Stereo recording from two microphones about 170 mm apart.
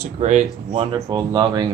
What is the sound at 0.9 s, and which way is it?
Speech, 25° right (ahead or behind).